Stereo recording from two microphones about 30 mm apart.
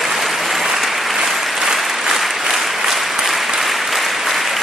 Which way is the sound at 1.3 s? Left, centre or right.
Centre.